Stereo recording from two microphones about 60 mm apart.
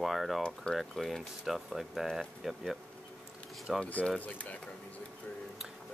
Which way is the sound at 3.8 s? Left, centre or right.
Left.